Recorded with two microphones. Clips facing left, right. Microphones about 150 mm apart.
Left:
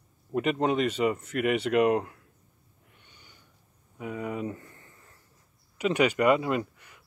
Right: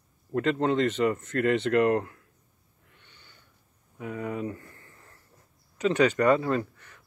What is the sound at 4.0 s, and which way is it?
Speech, 20° left (ahead or behind).